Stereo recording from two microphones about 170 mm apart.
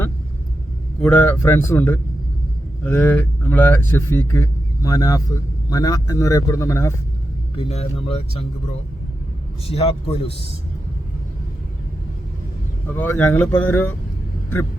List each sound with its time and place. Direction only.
1.0 s a man's voice: 10° left (ahead or behind)
7.5 s speech: 35° left (ahead or behind)
9.6 s speech: 35° left (ahead or behind)
13.0 s a man's voice: 10° left (ahead or behind)